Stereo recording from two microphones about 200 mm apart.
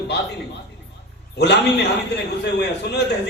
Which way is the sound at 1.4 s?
60° left (ahead or behind).